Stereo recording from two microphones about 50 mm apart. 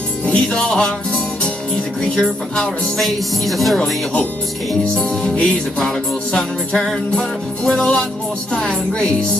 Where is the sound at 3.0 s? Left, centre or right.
Centre.